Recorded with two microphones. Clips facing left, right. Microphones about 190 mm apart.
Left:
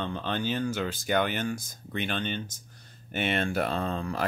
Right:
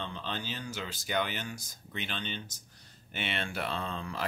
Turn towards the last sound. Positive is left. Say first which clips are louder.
# left 6 dB
turn(degrees=45)  # may be behind; listen again after turning